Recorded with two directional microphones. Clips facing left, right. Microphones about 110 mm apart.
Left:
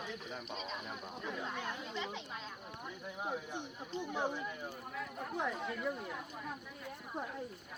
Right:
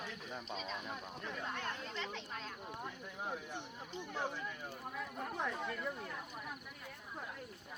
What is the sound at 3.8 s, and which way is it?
Speech, 15° left (ahead or behind).